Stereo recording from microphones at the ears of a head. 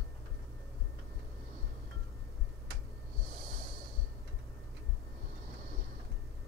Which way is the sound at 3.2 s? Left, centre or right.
Right.